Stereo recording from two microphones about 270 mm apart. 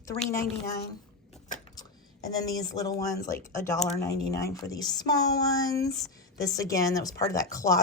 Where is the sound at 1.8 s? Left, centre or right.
Centre.